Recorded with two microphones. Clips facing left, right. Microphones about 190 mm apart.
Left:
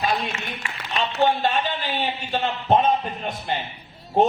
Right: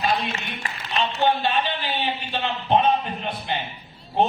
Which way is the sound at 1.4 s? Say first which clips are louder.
Left 1 dB; 45° left (ahead or behind).